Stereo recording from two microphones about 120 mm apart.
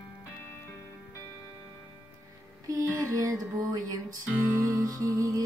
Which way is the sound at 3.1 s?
30° right (ahead or behind).